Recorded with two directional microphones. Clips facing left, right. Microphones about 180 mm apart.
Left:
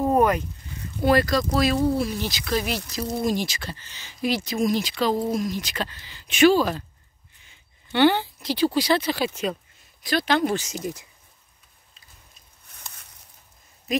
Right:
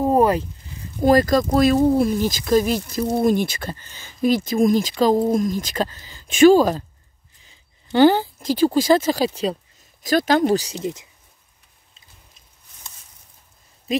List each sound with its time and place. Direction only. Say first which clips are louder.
0.0 s a sound: right 3 dB; 30° right (ahead or behind)
1.0 s speech: right 5 dB; 45° right (ahead or behind)
10.8 s speech: right 4 dB; 20° right (ahead or behind)
13.9 s speech: right 3 dB; 25° right (ahead or behind)